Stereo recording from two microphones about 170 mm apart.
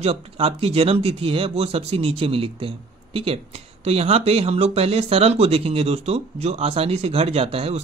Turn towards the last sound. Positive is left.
turn(degrees=-35)  # may be behind; listen again after turning